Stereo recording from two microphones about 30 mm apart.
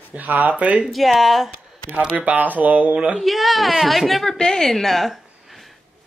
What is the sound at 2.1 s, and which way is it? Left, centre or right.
Speech, right.